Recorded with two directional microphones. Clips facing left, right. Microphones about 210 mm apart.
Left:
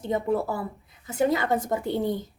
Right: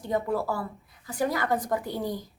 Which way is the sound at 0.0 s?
20° left (ahead or behind).